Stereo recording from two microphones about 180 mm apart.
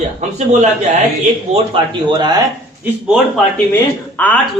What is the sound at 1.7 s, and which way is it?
Speech, 25° right (ahead or behind).